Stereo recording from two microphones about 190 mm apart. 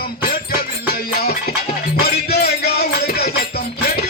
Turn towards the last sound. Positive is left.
turn(degrees=55)  # may be behind; listen again after turning